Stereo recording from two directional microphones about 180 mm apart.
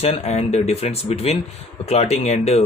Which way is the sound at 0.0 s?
35° left (ahead or behind).